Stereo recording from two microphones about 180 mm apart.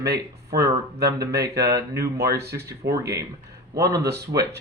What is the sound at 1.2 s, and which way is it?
Speech, 20° right (ahead or behind).